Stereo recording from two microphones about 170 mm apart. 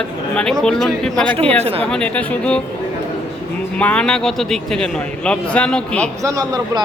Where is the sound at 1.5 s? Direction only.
35° right (ahead or behind).